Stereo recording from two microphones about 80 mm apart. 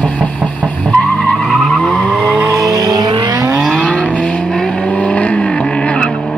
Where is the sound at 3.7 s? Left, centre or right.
Centre.